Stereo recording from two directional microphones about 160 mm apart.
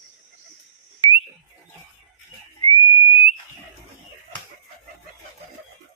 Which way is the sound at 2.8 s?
35° left (ahead or behind).